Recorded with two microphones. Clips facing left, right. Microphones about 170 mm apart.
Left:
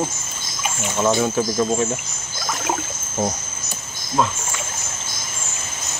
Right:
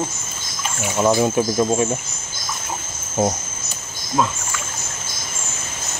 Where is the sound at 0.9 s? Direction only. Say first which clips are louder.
Right 2 dB; 15° right (ahead or behind).